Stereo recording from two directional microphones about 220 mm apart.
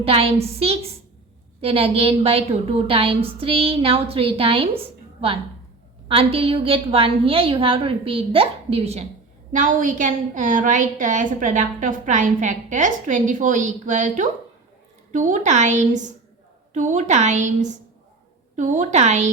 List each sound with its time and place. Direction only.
0.0 s a woman's voice: 25° right (ahead or behind)
6.1 s a woman's voice: 25° right (ahead or behind)